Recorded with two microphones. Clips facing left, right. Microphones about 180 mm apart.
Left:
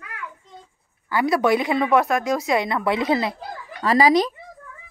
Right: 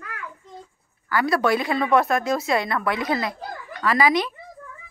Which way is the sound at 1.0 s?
20° left (ahead or behind).